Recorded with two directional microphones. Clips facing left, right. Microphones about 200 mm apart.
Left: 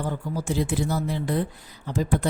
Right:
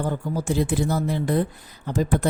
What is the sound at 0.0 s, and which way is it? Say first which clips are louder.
A woman's voice: right 3 dB; 50° right (ahead or behind).